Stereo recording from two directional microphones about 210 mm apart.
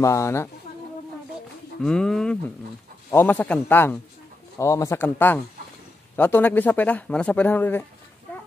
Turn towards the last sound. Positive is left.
turn(degrees=10)  # may be behind; listen again after turning